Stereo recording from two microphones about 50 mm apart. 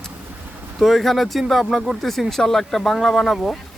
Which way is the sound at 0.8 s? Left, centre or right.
Centre.